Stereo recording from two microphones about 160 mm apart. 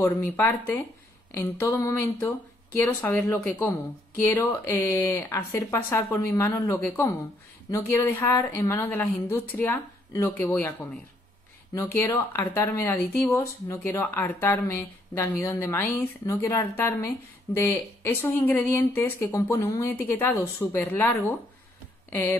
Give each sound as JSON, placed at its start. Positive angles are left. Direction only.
{"t": 0.0, "sound": "speech", "side_deg": 15}
{"t": 11.7, "sound": "speech", "side_deg": 15}